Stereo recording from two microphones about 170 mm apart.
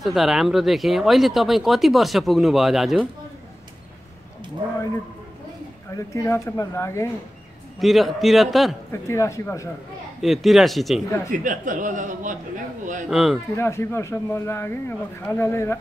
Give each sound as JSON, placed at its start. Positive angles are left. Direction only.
{"t": 0.0, "sound": "speech", "side_deg": 0}
{"t": 5.9, "sound": "speech", "side_deg": 15}
{"t": 7.8, "sound": "speech", "side_deg": 0}
{"t": 8.9, "sound": "speech", "side_deg": 15}
{"t": 10.2, "sound": "speech", "side_deg": 0}
{"t": 11.2, "sound": "a man's voice", "side_deg": -50}
{"t": 13.1, "sound": "speech", "side_deg": 0}
{"t": 13.6, "sound": "speech", "side_deg": 15}